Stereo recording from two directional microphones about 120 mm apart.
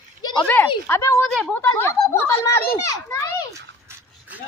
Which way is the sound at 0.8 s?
20° left (ahead or behind).